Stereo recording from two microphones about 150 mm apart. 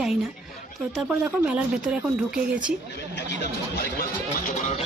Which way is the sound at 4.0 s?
70° left (ahead or behind).